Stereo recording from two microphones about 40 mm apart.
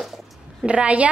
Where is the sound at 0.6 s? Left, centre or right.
Right.